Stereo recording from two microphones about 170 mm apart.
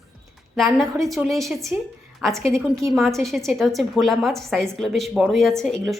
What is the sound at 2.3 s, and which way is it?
Speech, 15° right (ahead or behind).